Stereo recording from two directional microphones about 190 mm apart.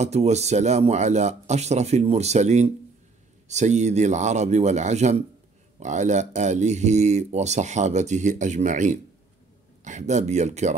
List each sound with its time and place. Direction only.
0.0 s speech: 35° right (ahead or behind)